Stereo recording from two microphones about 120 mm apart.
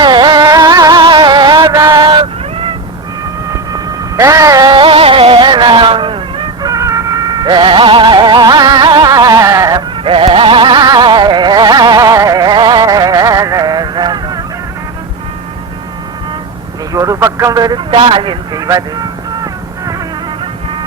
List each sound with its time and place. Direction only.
0.0 s music: 40° right (ahead or behind)
4.2 s music: 25° right (ahead or behind)
10.0 s music: 50° right (ahead or behind)
16.9 s vehicle: 25° right (ahead or behind)
17.2 s speech: 20° right (ahead or behind)
17.9 s a man's voice: 50° right (ahead or behind)
18.5 s speech: 30° right (ahead or behind)